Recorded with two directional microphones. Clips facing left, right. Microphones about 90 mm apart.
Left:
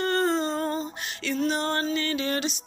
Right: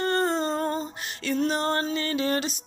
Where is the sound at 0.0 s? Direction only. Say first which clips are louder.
Even; 30° right (ahead or behind).